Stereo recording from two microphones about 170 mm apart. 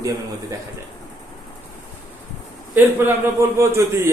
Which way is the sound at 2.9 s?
15° right (ahead or behind).